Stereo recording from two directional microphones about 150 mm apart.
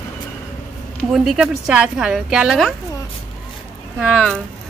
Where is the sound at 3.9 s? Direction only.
Centre (ahead or behind).